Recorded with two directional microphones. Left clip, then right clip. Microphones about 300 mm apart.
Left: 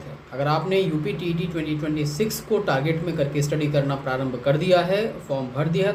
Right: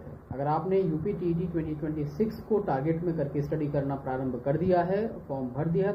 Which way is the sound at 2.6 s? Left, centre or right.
Centre.